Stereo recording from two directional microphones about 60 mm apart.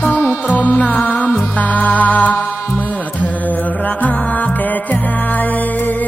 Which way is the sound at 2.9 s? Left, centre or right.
Left.